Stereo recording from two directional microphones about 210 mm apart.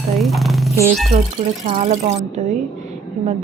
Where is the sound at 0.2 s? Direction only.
Centre (ahead or behind).